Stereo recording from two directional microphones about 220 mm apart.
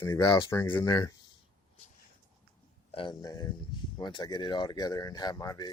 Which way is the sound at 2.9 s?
20° left (ahead or behind).